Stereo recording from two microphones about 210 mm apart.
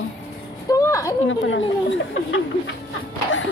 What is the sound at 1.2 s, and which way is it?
Speech, 65° left (ahead or behind).